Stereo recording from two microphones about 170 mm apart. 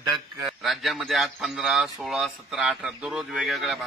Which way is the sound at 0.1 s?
Centre (ahead or behind).